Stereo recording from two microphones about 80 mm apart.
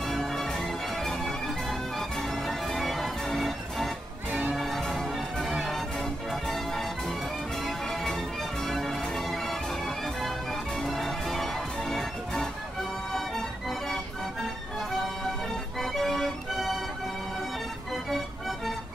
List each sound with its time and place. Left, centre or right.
0.0 s music: centre
4.3 s music: centre
4.6 s music: centre
7.6 s change ringing: centre
13.1 s music: centre
15.8 s music: centre